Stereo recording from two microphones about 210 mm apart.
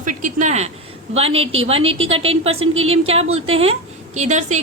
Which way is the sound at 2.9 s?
30° right (ahead or behind).